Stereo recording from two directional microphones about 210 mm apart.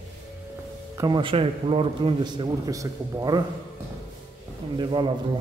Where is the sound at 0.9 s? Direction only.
20° right (ahead or behind).